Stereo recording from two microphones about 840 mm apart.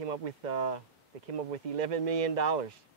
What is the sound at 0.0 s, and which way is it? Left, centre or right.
Speech, right.